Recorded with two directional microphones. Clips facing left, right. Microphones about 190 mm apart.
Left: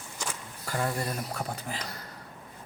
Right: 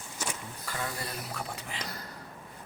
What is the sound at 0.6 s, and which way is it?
Speech, 45° left (ahead or behind).